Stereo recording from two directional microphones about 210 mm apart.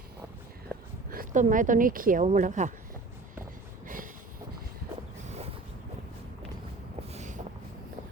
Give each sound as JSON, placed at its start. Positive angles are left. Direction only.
{"t": 1.1, "sound": "speech", "side_deg": -40}
{"t": 3.8, "sound": "train", "side_deg": -40}
{"t": 7.1, "sound": "vehicle", "side_deg": -35}